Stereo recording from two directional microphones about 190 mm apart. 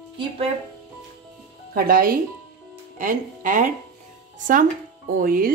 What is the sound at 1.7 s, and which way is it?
Speech, 50° right (ahead or behind).